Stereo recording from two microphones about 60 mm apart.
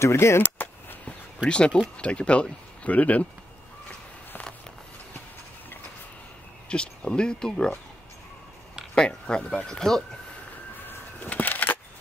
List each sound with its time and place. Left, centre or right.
0.0 s speech: left
0.4 s a sound: left
2.0 s speech: centre
6.7 s speech: centre
8.9 s speech: centre
10.9 s a sound: left